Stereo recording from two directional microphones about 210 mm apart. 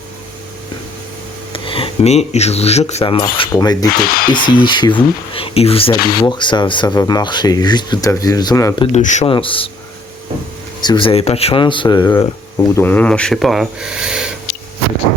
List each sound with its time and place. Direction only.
1.5 s speech: 25° left (ahead or behind)
4.0 s speech: 45° left (ahead or behind)
4.3 s speech: 20° left (ahead or behind)
8.9 s speech: 35° left (ahead or behind)
10.8 s speech: 20° left (ahead or behind); by 14.3 s 5° right (ahead or behind)